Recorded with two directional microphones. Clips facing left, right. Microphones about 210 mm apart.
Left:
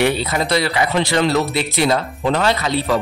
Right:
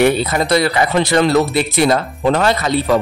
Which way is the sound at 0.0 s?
50° right (ahead or behind).